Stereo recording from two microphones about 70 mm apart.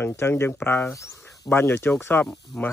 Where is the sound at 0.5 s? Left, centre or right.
Left.